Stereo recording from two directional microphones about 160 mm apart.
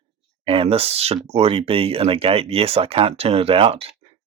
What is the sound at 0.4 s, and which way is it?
Speech, 35° right (ahead or behind).